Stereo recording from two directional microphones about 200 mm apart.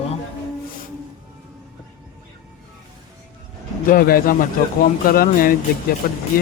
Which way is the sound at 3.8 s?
45° left (ahead or behind).